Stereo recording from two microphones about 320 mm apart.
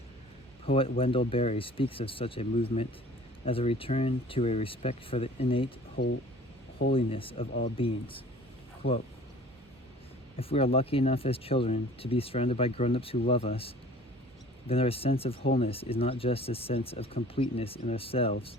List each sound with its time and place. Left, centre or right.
0.6 s speech: centre
6.0 s speech: left
6.9 s speech: centre
8.8 s speech: left
10.3 s speech: centre